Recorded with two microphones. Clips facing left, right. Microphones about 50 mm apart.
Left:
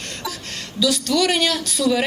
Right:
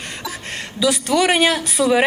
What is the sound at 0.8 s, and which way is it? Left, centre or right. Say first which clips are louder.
Speech: right 2 dB; right.